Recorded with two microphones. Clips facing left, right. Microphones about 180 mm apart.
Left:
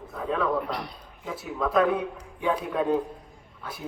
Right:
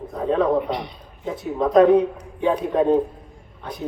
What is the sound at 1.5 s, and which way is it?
A man's voice, 40° right (ahead or behind).